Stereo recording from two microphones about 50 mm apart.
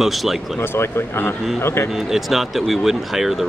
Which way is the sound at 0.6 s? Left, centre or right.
Left.